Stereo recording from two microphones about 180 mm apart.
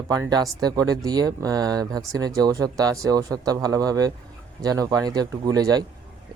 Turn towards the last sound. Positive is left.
turn(degrees=-20)  # may be behind; listen again after turning